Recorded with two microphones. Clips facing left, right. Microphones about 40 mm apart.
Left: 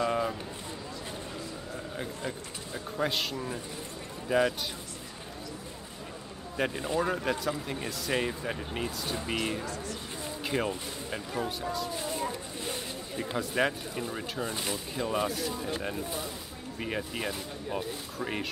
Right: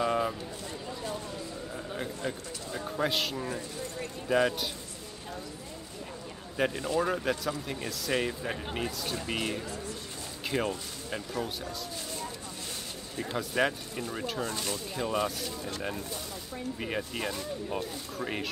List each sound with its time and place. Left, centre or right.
0.0 s a sound: centre
2.7 s speech: centre
6.5 s a man's voice: centre
13.2 s speech: centre
14.5 s speech: centre
15.0 s speech: centre
16.8 s speech: centre